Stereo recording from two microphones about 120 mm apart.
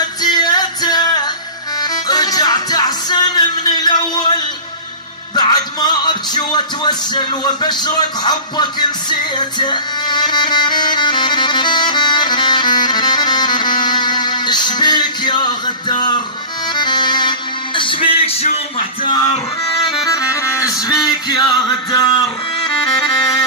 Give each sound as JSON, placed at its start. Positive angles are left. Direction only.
{"t": 0.2, "sound": "music", "side_deg": 35}
{"t": 5.3, "sound": "music", "side_deg": 35}
{"t": 20.1, "sound": "music", "side_deg": 30}